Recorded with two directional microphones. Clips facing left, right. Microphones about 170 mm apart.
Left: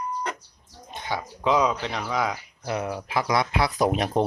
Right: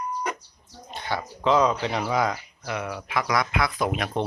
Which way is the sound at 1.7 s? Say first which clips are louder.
Right 3 dB; 5° right (ahead or behind).